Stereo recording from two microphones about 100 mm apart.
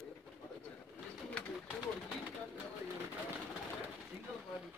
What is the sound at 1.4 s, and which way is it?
Bird, 10° left (ahead or behind).